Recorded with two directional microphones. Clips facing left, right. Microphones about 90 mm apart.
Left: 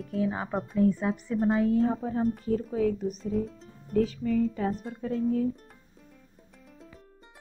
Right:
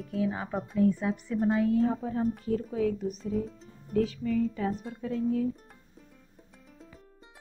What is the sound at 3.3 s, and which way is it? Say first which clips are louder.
Speech: left 2 dB; centre (ahead or behind).